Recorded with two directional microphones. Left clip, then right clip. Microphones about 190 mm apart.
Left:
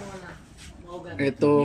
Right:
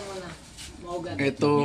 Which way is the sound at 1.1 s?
Centre (ahead or behind).